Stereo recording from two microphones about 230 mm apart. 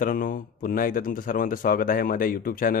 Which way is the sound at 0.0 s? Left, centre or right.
Left.